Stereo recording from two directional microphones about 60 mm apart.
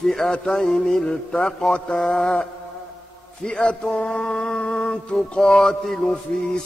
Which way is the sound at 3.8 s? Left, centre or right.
Centre.